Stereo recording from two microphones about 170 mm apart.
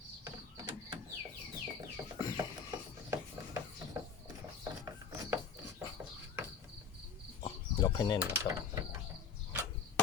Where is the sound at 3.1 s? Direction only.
15° right (ahead or behind).